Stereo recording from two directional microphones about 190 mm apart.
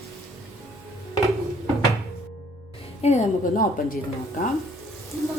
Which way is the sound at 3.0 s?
35° left (ahead or behind).